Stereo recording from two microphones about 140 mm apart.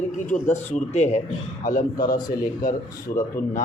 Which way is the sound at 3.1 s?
55° left (ahead or behind).